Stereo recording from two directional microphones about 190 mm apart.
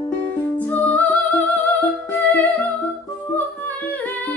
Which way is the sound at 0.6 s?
10° left (ahead or behind).